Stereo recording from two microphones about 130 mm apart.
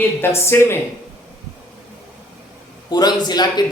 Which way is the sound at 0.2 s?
20° left (ahead or behind).